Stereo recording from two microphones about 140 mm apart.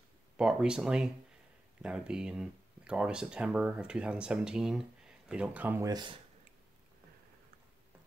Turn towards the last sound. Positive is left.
turn(degrees=-30)  # may be behind; listen again after turning